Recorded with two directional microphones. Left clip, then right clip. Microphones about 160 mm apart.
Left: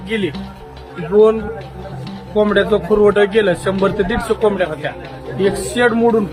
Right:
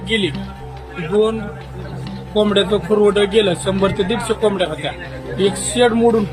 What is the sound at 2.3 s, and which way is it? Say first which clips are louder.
A man's voice: left 2 dB; 5° right (ahead or behind).